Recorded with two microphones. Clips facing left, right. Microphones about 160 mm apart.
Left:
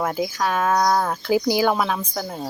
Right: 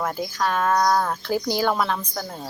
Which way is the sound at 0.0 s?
5° left (ahead or behind).